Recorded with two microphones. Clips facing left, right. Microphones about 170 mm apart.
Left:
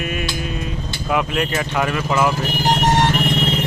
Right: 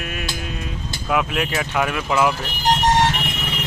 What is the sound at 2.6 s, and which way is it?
Vehicle, 60° left (ahead or behind).